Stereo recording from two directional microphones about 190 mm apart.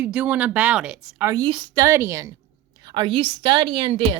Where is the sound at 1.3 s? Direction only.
25° right (ahead or behind).